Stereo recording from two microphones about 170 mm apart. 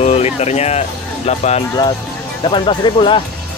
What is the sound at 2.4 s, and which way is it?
Speech, 30° left (ahead or behind).